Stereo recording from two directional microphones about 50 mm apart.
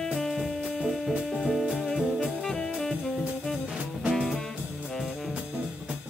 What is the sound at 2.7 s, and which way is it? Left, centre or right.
Jazz, centre.